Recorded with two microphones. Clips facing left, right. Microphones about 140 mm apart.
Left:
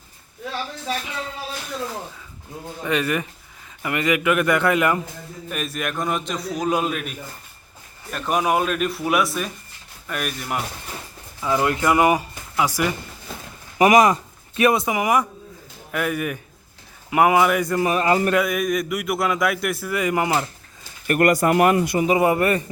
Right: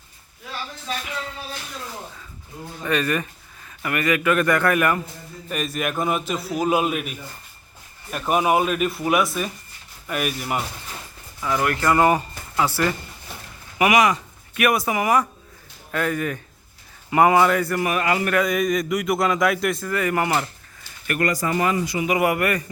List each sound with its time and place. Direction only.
2.8 s speech: 15° left (ahead or behind)
5.5 s a man's voice: centre (ahead or behind)
11.4 s speech: 20° left (ahead or behind)
13.7 s speech: 35° left (ahead or behind)
18.3 s a man's voice: 5° left (ahead or behind); by 20.5 s 20° left (ahead or behind)
21.2 s speech: 55° left (ahead or behind)
22.0 s a man's voice: 25° left (ahead or behind)